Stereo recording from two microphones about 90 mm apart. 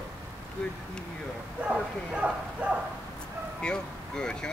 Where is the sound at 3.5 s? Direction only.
10° left (ahead or behind).